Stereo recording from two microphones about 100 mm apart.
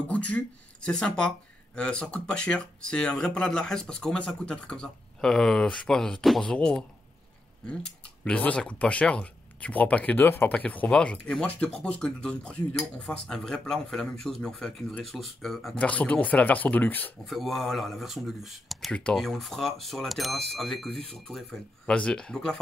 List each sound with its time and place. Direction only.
0.1 s speech: 15° left (ahead or behind)
15.7 s speech: 15° left (ahead or behind)
17.3 s speech: centre (ahead or behind)
18.9 s speech: 10° left (ahead or behind)